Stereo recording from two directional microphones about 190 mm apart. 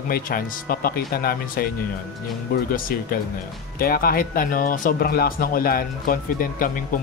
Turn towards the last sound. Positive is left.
turn(degrees=45)  # may be behind; listen again after turning